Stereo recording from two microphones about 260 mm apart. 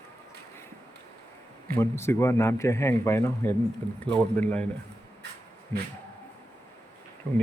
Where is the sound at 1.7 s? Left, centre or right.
Centre.